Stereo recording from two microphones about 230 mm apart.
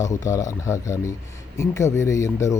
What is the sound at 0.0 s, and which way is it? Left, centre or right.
Speech, centre.